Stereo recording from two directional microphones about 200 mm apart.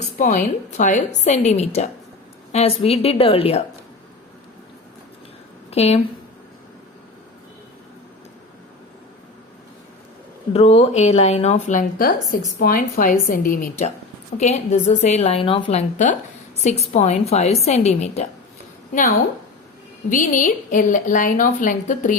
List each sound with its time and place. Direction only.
0.0 s a woman's voice: 40° left (ahead or behind)
5.7 s a woman's voice: 30° left (ahead or behind)
10.5 s a woman's voice: 30° left (ahead or behind)
16.0 s a woman's voice: 35° left (ahead or behind)
20.1 s a woman's voice: 40° left (ahead or behind)